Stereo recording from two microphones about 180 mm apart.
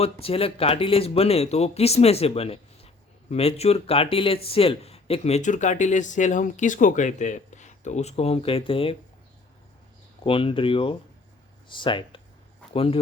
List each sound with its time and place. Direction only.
0.0 s speech: 30° left (ahead or behind)
10.2 s speech: 30° left (ahead or behind)